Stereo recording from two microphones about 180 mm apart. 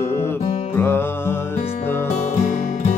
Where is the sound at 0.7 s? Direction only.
15° left (ahead or behind).